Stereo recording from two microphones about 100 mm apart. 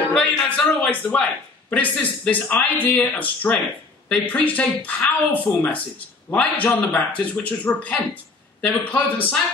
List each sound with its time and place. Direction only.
0.1 s a man's voice: 10° left (ahead or behind)